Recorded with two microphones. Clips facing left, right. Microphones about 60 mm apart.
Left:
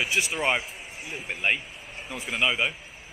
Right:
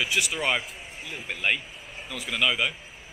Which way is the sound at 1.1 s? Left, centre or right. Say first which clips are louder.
Even; centre.